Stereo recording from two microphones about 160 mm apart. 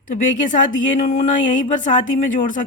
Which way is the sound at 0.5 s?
50° left (ahead or behind).